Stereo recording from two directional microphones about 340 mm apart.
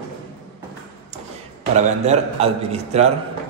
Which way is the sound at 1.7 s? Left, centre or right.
Centre.